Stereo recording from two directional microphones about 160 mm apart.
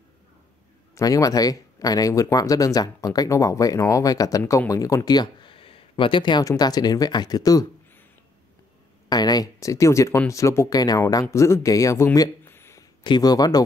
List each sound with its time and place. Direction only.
0.9 s speech: 20° left (ahead or behind)
9.1 s speech: 25° left (ahead or behind)
13.0 s speech: 25° left (ahead or behind)